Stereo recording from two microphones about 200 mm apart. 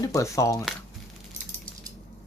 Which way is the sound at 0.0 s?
15° left (ahead or behind).